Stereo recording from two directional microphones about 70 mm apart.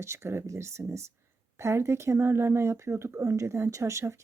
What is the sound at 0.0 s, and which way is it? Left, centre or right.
Speech, right.